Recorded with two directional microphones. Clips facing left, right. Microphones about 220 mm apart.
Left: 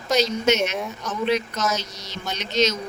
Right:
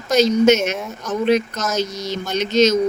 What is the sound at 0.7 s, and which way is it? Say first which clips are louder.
Speech: right 1 dB; centre (ahead or behind).